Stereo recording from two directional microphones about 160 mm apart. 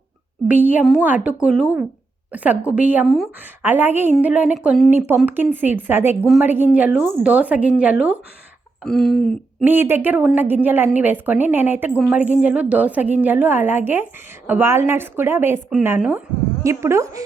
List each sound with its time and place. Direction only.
0.4 s a woman's voice: 10° right (ahead or behind)
9.6 s a woman's voice: 15° right (ahead or behind)